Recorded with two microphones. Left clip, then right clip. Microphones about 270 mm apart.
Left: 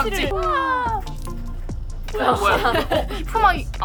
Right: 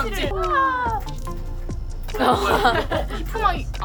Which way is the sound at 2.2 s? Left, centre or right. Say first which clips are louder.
Even; right.